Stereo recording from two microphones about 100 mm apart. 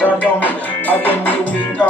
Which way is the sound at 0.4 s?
15° left (ahead or behind).